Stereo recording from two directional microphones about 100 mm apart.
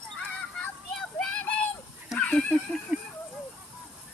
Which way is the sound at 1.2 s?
15° left (ahead or behind).